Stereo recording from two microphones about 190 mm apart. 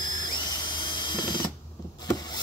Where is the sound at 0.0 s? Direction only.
20° left (ahead or behind).